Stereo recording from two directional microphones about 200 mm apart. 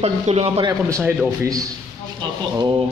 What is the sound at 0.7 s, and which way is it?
Speech, 15° right (ahead or behind).